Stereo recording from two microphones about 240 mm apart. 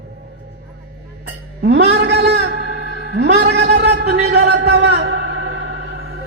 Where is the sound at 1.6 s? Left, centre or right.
Right.